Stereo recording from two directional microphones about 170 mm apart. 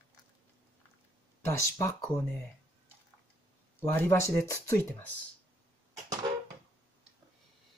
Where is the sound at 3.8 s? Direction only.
15° left (ahead or behind).